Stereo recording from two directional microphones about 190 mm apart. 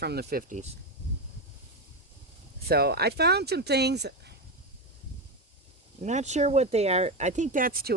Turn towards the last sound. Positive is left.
turn(degrees=-50)  # may be behind; listen again after turning